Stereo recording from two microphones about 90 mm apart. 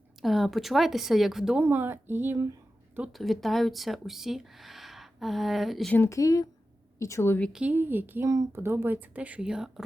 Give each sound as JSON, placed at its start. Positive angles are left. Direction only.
{"t": 0.2, "sound": "speech", "side_deg": 0}
{"t": 1.5, "sound": "speech", "side_deg": -20}
{"t": 3.1, "sound": "speech", "side_deg": 0}
{"t": 5.9, "sound": "a woman's voice", "side_deg": 30}
{"t": 7.5, "sound": "speech", "side_deg": -15}
{"t": 8.3, "sound": "speech", "side_deg": -35}